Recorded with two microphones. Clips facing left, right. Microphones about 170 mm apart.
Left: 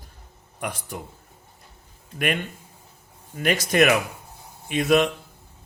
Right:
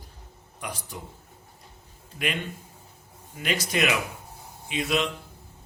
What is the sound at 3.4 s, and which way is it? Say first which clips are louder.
A man's voice: left 7 dB; 55° left (ahead or behind).